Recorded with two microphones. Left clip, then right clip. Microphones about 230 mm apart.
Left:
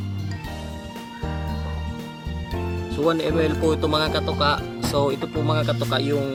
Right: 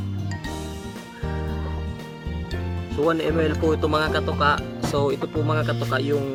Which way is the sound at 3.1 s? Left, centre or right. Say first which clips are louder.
Left 1 dB; centre.